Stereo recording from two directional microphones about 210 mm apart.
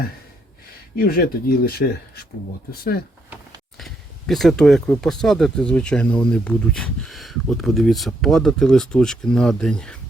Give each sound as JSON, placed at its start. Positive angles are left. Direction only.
{"t": 0.9, "sound": "speech", "side_deg": 45}
{"t": 3.8, "sound": "speech", "side_deg": 0}